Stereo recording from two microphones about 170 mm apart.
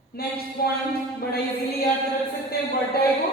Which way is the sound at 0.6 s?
60° left (ahead or behind).